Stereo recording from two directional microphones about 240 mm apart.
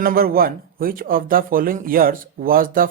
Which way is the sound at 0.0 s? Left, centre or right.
Right.